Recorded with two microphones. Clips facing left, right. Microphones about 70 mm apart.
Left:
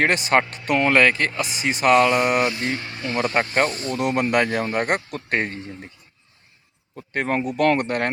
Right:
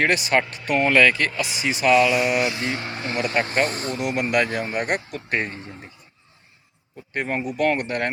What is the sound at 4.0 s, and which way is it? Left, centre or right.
Speech, left.